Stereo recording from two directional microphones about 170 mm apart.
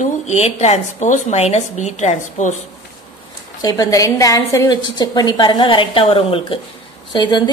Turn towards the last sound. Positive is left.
turn(degrees=25)  # may be behind; listen again after turning